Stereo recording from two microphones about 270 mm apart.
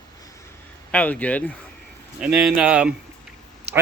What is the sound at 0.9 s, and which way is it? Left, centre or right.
Speech, centre.